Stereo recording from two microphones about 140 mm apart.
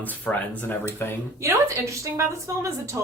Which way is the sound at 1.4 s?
20° right (ahead or behind).